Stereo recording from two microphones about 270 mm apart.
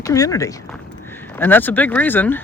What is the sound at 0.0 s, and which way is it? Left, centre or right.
Speech, centre.